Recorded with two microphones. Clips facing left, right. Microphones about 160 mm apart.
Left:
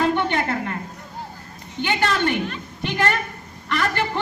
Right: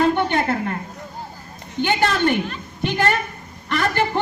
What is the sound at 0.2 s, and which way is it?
Speech, 30° right (ahead or behind).